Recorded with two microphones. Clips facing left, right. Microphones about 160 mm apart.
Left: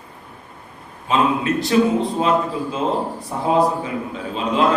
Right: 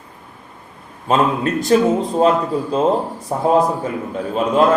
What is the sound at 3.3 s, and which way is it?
Speech, 45° right (ahead or behind).